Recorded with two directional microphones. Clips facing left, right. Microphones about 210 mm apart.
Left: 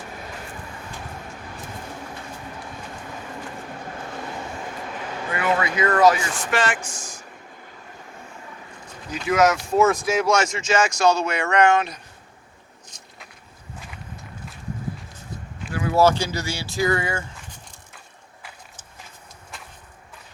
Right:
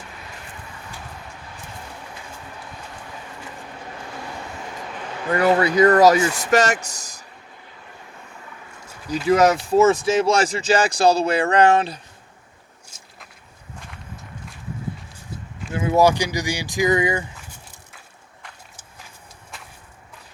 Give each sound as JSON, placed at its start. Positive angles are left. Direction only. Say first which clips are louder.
{"t": 5.3, "sound": "speech", "louder": "right 6 dB", "side_deg": -40}
{"t": 9.0, "sound": "speech", "louder": "right 3 dB", "side_deg": -35}
{"t": 12.9, "sound": "a sound", "louder": "left 1 dB", "side_deg": -10}
{"t": 15.7, "sound": "speech", "louder": "right 1 dB", "side_deg": -20}